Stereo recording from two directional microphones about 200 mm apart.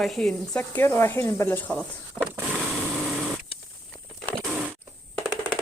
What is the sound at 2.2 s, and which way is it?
Snake, 10° left (ahead or behind).